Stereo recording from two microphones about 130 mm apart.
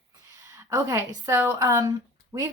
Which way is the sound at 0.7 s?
25° right (ahead or behind).